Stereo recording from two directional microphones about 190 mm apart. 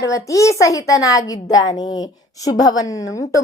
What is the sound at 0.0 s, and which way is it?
A woman's voice, 15° left (ahead or behind).